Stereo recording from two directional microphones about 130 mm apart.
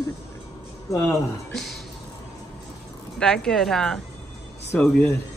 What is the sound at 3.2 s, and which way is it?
Speech, 5° left (ahead or behind).